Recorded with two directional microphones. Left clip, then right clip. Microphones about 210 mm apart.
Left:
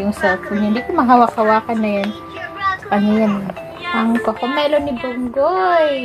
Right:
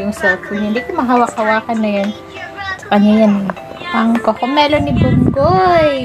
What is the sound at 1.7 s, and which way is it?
Speech, 10° right (ahead or behind).